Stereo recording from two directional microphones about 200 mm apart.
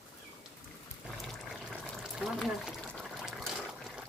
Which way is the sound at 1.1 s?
Centre (ahead or behind).